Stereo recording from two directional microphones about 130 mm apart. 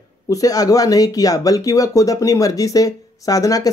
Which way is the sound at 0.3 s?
25° left (ahead or behind).